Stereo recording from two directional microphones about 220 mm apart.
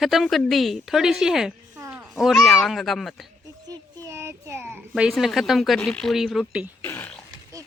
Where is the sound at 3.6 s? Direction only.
15° right (ahead or behind).